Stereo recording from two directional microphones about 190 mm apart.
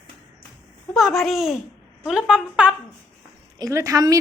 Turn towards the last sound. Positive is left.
turn(degrees=-20)  # may be behind; listen again after turning